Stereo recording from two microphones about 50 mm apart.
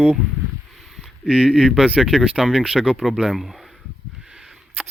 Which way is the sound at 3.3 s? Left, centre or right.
Centre.